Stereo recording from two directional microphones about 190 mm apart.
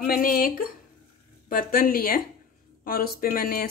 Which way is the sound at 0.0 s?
50° left (ahead or behind).